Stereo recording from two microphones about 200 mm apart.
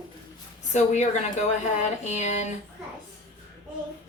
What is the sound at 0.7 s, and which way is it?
A woman's voice, 35° left (ahead or behind).